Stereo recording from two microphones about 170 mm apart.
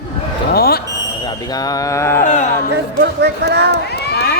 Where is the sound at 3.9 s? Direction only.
70° left (ahead or behind).